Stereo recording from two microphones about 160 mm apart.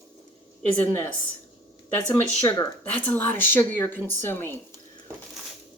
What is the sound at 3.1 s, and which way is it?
A woman's voice, 15° left (ahead or behind).